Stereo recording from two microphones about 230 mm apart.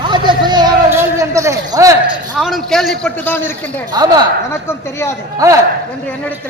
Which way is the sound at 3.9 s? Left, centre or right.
Centre.